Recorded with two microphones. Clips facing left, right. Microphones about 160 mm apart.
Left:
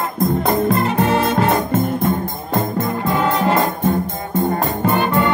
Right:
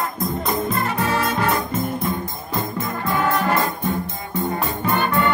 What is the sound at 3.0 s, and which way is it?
Brass instrument, 20° left (ahead or behind).